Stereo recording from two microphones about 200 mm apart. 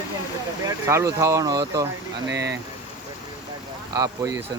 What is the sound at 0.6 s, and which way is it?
Speech, 15° right (ahead or behind).